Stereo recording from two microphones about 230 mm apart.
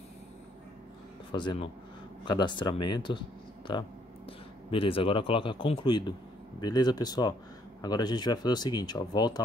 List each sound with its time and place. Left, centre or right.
1.3 s speech: centre